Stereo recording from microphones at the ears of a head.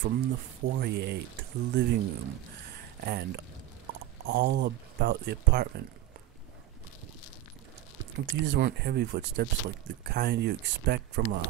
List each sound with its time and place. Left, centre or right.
0.0 s speech: right
8.0 s speech: right